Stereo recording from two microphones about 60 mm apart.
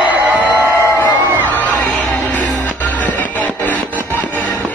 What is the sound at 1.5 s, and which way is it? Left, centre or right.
Music, left.